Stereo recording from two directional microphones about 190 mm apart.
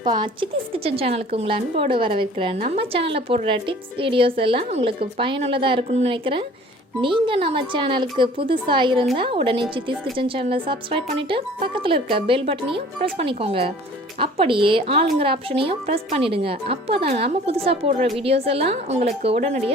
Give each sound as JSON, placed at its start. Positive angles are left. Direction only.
{"t": 0.0, "sound": "a woman's voice", "side_deg": -25}